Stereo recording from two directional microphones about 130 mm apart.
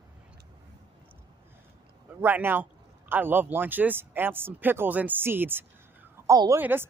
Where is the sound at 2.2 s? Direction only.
15° right (ahead or behind).